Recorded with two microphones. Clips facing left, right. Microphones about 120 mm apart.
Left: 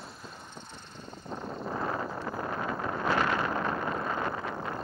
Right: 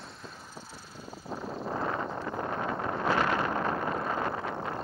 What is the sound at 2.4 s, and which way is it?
Wind noise, 25° right (ahead or behind).